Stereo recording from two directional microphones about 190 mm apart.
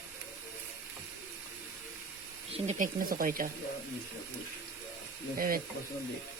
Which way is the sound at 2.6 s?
45° right (ahead or behind).